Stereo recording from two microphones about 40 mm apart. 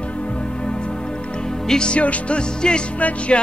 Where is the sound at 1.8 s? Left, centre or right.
Left.